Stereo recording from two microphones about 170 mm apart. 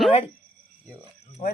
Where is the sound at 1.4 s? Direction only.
45° left (ahead or behind).